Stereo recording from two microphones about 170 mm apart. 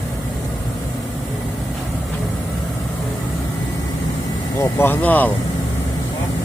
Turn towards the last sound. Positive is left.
turn(degrees=10)  # may be behind; listen again after turning